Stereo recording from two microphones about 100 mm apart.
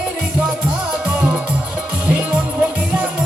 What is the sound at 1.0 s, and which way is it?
Music, 10° right (ahead or behind).